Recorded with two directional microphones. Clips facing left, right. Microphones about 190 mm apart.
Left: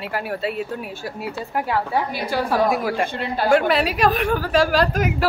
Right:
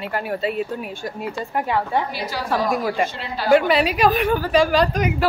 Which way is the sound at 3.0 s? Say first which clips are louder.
Left 3 dB; 50° left (ahead or behind).